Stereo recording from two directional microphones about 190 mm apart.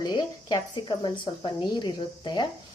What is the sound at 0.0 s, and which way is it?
Speech, 20° left (ahead or behind).